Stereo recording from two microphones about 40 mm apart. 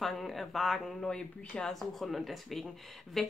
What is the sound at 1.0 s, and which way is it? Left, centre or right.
Speech, centre.